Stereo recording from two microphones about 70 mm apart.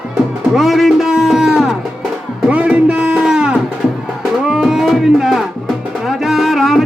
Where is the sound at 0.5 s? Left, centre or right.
Centre.